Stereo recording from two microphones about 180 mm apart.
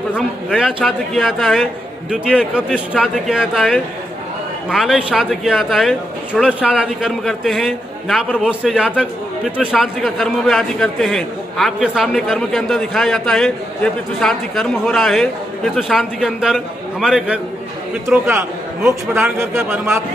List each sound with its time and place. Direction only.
0.1 s speech: 5° right (ahead or behind)
18.8 s a man's voice: 10° right (ahead or behind)